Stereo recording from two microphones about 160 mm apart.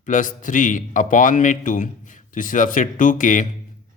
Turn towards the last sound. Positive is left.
turn(degrees=55)  # may be behind; listen again after turning